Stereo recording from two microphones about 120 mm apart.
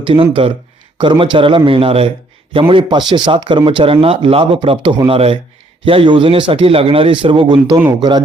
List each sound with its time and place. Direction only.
0.0 s a man's voice: 45° right (ahead or behind)